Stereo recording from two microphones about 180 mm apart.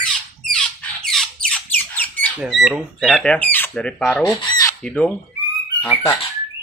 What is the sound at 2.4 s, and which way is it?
Speech, 5° right (ahead or behind).